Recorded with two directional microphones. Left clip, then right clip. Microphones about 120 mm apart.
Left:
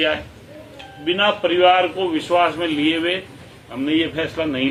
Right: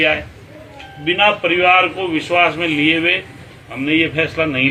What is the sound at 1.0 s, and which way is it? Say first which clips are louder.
A man's voice: right 4 dB; 30° left (ahead or behind).